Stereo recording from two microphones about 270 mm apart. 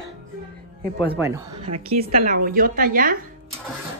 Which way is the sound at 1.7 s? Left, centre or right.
Right.